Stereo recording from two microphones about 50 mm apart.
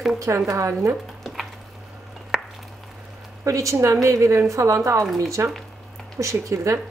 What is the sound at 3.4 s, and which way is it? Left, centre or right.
A woman's voice, right.